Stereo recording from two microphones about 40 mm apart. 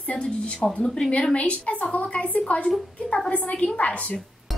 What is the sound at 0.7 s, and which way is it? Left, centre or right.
A woman's voice, left.